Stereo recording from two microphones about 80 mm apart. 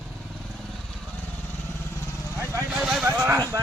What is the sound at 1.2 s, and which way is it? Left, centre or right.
Vehicle, left.